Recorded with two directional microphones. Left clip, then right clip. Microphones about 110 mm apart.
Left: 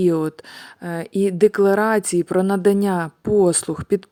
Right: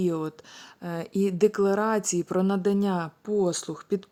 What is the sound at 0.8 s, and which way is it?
A woman's voice, 30° left (ahead or behind).